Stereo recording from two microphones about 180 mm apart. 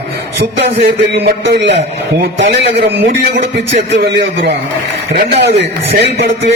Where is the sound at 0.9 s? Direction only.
65° right (ahead or behind).